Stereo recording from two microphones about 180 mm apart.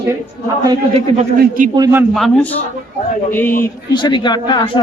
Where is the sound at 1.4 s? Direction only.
50° right (ahead or behind).